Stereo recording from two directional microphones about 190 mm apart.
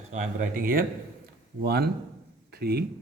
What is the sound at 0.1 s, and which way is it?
A man's voice, 45° right (ahead or behind).